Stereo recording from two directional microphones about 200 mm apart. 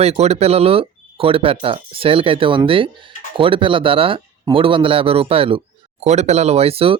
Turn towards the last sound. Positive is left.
turn(degrees=-30)  # may be behind; listen again after turning